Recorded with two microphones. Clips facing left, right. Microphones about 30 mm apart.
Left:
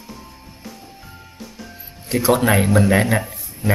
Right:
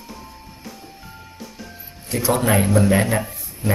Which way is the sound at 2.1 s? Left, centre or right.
Left.